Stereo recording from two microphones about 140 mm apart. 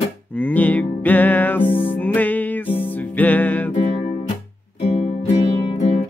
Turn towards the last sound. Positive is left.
turn(degrees=45)  # may be behind; listen again after turning